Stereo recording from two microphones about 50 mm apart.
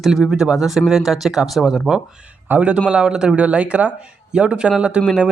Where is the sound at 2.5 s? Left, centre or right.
Right.